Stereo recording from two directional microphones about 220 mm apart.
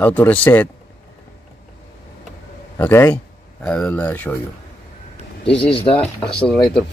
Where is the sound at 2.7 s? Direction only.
10° left (ahead or behind).